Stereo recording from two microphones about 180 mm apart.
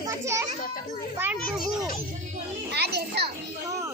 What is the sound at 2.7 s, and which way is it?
Speech, 65° right (ahead or behind).